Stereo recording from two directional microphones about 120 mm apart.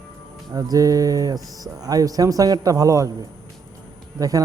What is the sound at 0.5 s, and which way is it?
Speech, 30° right (ahead or behind).